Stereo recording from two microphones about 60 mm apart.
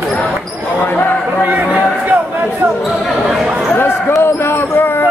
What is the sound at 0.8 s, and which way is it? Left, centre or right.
Basketball bounce, left.